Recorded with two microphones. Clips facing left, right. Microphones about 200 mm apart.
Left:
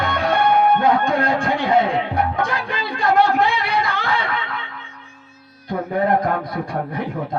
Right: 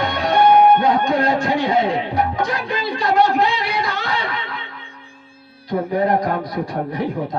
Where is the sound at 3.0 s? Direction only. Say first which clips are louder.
Even; 55° left (ahead or behind).